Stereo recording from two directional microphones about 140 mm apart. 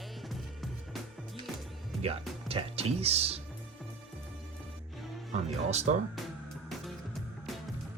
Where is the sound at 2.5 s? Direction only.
45° right (ahead or behind).